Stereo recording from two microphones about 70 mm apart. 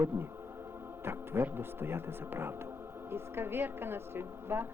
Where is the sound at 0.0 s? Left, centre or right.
Right.